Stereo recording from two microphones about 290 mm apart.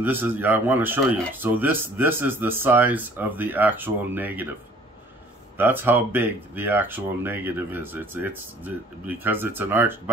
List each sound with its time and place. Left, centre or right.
0.0 s speech: centre
5.6 s speech: centre